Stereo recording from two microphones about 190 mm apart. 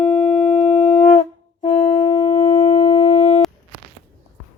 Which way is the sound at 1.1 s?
30° left (ahead or behind).